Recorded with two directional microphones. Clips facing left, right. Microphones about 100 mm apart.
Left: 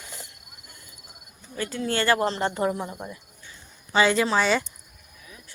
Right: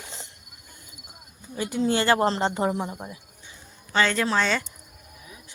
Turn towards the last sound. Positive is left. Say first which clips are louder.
# left 2 dB
turn(degrees=10)  # may be behind; listen again after turning